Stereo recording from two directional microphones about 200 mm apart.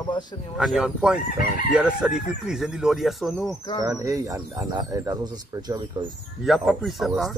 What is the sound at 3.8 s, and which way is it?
Speech, 15° right (ahead or behind).